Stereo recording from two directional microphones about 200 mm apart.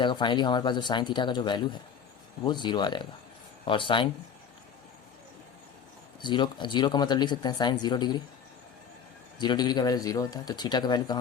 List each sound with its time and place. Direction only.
0.0 s speech: 25° left (ahead or behind)
6.2 s speech: 25° left (ahead or behind)
9.4 s speech: 20° left (ahead or behind)